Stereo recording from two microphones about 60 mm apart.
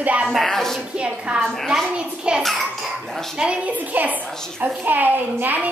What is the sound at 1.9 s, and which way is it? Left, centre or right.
Hands, centre.